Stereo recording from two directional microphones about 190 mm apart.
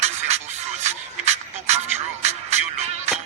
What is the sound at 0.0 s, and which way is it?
Music, 35° right (ahead or behind).